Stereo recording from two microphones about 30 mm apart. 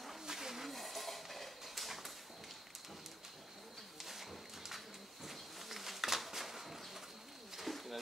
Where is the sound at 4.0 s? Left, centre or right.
Centre.